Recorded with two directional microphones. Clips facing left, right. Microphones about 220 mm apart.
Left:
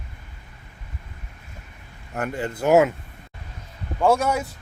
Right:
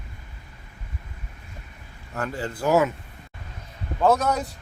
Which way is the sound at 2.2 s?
20° left (ahead or behind).